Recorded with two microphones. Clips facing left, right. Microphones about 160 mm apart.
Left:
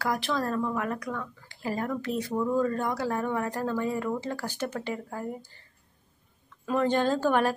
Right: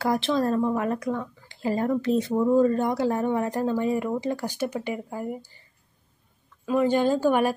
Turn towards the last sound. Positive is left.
turn(degrees=-10)  # may be behind; listen again after turning